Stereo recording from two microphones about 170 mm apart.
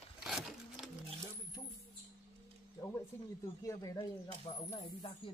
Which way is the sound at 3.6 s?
15° left (ahead or behind).